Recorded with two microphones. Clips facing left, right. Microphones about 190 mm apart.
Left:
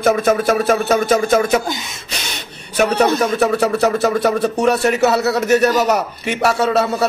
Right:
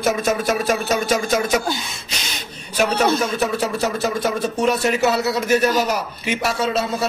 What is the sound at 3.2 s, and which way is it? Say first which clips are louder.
Speech: left 5 dB; 65° left (ahead or behind).